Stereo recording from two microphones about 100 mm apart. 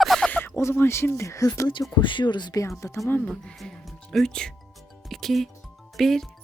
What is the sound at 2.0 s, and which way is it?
Speech, 55° left (ahead or behind).